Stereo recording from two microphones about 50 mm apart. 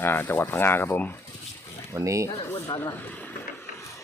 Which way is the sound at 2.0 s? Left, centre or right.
Right.